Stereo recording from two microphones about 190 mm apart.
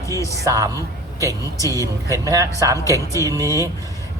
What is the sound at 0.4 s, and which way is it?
Speech, 15° right (ahead or behind).